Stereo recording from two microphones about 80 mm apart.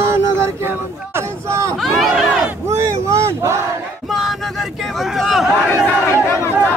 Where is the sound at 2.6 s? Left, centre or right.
Right.